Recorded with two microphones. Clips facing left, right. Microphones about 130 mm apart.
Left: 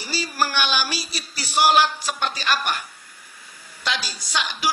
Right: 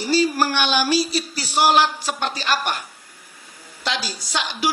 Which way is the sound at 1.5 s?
15° right (ahead or behind).